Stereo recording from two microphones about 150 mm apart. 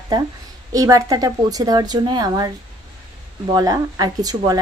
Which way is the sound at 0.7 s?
25° right (ahead or behind).